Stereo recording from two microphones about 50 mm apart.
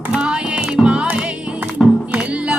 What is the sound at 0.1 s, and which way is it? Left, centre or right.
Music, centre.